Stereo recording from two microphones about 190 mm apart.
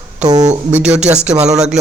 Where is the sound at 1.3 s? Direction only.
35° right (ahead or behind).